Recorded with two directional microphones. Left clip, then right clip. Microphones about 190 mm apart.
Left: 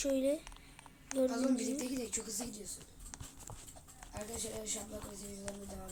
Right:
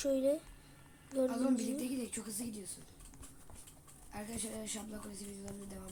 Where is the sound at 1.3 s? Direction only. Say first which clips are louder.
Even; 30° right (ahead or behind).